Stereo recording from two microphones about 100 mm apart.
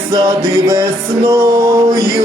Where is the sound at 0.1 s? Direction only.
35° right (ahead or behind).